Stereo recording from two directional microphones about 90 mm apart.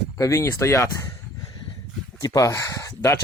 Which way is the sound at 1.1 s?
60° left (ahead or behind).